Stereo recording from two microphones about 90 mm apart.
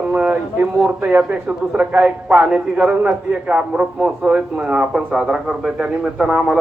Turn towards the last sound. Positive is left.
turn(degrees=-5)  # may be behind; listen again after turning